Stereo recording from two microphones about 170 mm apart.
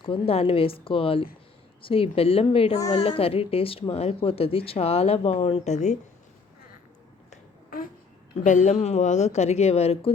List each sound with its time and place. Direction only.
0.0 s speech: 35° left (ahead or behind)
7.3 s finger snapping: 55° left (ahead or behind)
8.4 s speech: 45° left (ahead or behind)